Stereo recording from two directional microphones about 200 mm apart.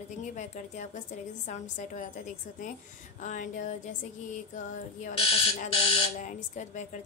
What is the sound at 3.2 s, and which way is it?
Speech, 40° left (ahead or behind).